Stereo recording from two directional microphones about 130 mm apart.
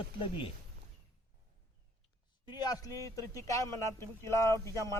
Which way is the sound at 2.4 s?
30° left (ahead or behind).